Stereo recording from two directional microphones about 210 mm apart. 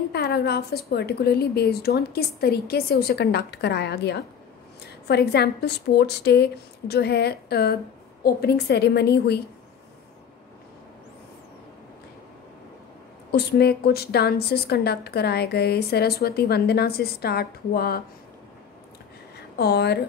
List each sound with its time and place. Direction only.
0.1 s a woman's voice: 50° left (ahead or behind)
13.3 s a woman's voice: 50° left (ahead or behind)
19.5 s a woman's voice: 50° left (ahead or behind)